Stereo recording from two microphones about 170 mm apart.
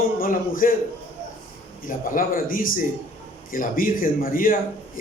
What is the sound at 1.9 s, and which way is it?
A man's voice, 55° left (ahead or behind).